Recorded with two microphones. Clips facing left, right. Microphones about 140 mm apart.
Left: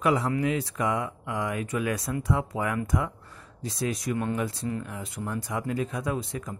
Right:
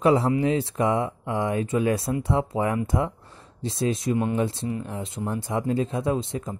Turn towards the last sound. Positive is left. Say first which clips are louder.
# right 5 dB
turn(degrees=-25)  # may be behind; listen again after turning